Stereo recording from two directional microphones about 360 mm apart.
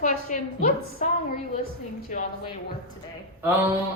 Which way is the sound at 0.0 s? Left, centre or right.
Left.